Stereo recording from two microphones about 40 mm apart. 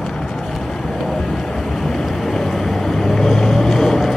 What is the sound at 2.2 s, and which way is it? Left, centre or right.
Boat, centre.